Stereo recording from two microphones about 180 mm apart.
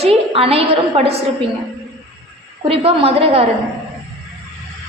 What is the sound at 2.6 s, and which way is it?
Speech, 30° right (ahead or behind).